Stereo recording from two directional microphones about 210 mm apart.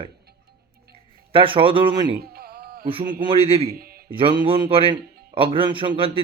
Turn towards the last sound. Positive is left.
turn(degrees=-25)  # may be behind; listen again after turning